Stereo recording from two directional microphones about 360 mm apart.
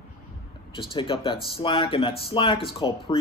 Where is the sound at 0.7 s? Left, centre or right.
Centre.